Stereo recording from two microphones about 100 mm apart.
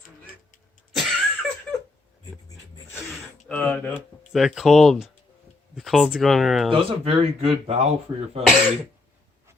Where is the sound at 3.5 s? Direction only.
15° left (ahead or behind).